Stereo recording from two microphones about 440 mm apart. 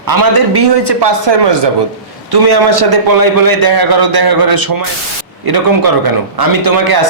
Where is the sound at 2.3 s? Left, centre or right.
Right.